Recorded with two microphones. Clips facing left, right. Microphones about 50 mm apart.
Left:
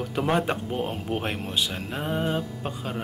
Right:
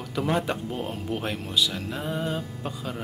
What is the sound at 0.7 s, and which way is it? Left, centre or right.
Speech, centre.